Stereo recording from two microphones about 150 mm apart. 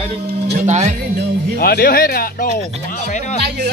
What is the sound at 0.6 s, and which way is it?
Speech, 50° right (ahead or behind).